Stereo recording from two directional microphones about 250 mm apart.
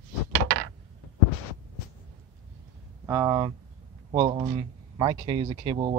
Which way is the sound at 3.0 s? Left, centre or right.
Centre.